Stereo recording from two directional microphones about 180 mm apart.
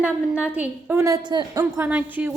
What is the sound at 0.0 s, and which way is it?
A woman's voice, 5° right (ahead or behind).